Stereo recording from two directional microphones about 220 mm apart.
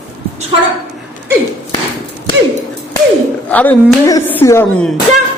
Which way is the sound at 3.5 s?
5° left (ahead or behind).